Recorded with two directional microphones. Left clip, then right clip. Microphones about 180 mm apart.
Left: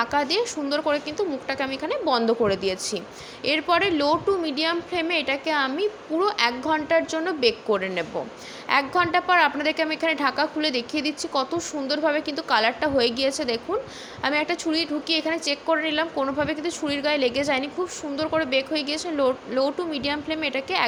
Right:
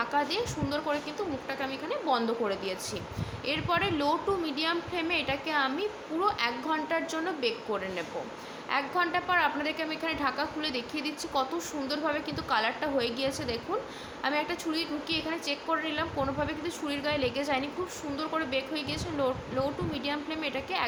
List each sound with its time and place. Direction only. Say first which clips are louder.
0.0 s a woman's voice: left 6 dB; 40° left (ahead or behind)